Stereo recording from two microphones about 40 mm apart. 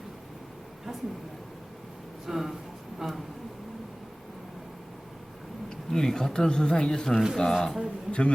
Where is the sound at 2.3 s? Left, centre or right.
Centre.